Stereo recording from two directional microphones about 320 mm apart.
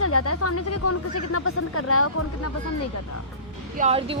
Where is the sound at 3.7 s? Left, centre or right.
Centre.